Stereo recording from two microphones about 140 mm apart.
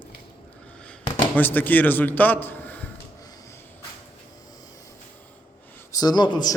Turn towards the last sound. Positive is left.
turn(degrees=30)  # may be behind; listen again after turning